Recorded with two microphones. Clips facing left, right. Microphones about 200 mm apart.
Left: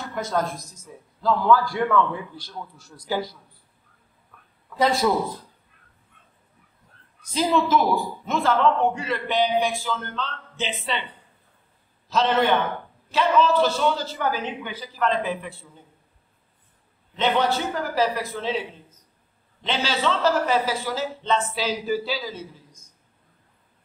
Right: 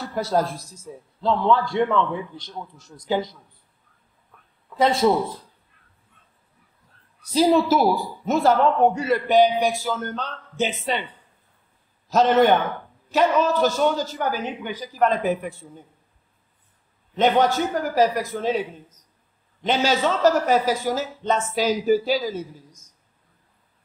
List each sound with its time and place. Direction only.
0.0 s a man's voice: 35° right (ahead or behind)
4.8 s a man's voice: 25° right (ahead or behind)
7.2 s a man's voice: 35° right (ahead or behind)
12.1 s a man's voice: 45° right (ahead or behind)
17.1 s a man's voice: 45° right (ahead or behind)